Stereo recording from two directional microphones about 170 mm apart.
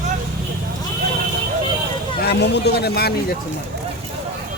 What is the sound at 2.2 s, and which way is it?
Speech, 75° left (ahead or behind).